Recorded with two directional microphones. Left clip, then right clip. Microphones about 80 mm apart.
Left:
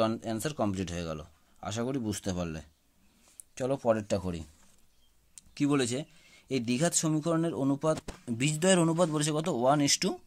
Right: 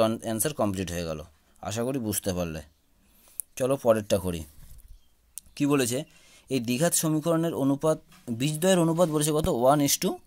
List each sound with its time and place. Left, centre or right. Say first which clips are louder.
0.0 s speech: right 5 dB; right
3.5 s speech: right 5 dB; right
5.3 s speech: right 4 dB; right
9.2 s speech: right 5 dB; right